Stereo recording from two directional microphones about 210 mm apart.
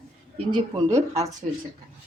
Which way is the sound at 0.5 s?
15° right (ahead or behind).